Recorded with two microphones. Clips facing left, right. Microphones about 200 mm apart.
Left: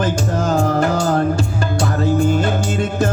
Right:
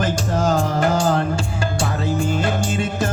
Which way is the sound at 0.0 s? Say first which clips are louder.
Left 1 dB; 60° left (ahead or behind).